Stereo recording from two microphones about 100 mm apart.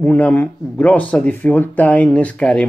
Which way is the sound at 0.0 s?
15° left (ahead or behind).